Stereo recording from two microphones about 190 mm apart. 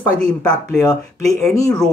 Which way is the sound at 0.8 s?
20° left (ahead or behind).